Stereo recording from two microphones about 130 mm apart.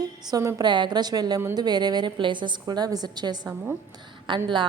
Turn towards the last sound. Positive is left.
turn(degrees=-40)  # may be behind; listen again after turning